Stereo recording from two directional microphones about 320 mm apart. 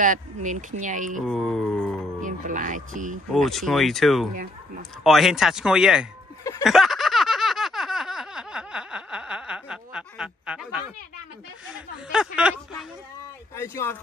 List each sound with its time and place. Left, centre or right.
0.0 s speech: right
1.2 s speech: centre
2.2 s speech: right
3.4 s speech: centre
6.6 s a sound: centre
11.7 s speech: centre
13.6 s speech: centre